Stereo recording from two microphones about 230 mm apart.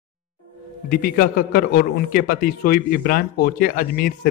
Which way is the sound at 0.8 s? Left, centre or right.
Left.